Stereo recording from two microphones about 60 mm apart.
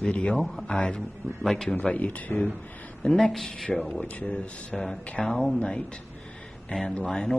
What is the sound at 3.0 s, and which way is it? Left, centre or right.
Speech, centre.